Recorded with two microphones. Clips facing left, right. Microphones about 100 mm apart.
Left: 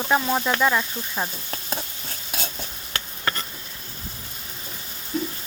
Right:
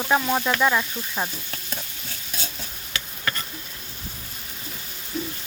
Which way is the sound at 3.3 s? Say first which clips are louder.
Left 2 dB; 30° left (ahead or behind).